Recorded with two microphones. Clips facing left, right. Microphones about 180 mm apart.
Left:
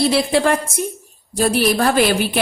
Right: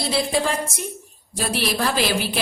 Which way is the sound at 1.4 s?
50° left (ahead or behind).